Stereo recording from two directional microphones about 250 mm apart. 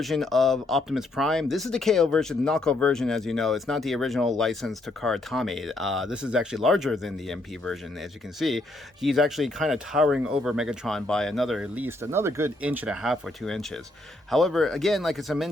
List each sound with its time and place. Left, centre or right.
0.0 s speech: centre